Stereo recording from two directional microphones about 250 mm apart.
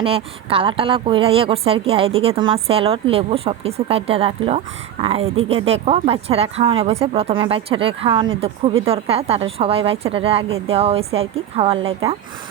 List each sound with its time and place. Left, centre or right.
0.0 s a woman's voice: right